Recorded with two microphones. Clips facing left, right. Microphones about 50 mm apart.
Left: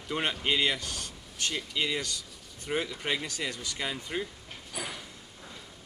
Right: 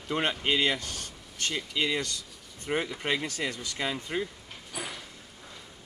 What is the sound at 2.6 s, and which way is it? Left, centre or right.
Speech, right.